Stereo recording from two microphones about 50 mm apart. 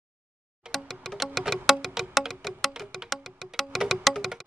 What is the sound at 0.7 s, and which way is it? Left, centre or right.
Music, centre.